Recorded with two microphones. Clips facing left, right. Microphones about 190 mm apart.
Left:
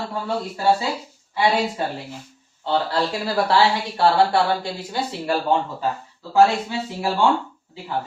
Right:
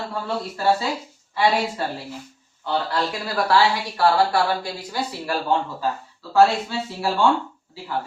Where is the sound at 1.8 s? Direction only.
20° left (ahead or behind).